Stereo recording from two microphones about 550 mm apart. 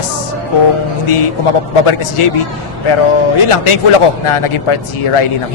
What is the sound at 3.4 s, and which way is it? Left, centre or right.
Speech, left.